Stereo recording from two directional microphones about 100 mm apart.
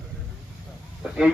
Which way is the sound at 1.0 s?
5° right (ahead or behind).